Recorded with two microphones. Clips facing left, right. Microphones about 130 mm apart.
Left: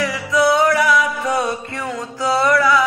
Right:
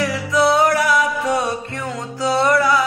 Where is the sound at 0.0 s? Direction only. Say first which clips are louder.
Even; 30° right (ahead or behind).